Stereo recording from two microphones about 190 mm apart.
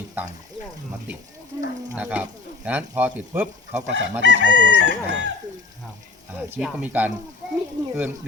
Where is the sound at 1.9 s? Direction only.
5° right (ahead or behind).